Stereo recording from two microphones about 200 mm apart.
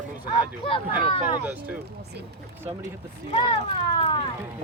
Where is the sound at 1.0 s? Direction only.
25° left (ahead or behind).